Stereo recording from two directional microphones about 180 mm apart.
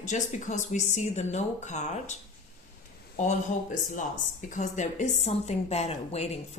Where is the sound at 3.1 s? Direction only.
40° left (ahead or behind).